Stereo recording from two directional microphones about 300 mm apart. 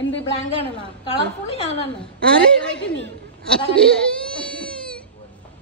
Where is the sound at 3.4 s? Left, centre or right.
Centre.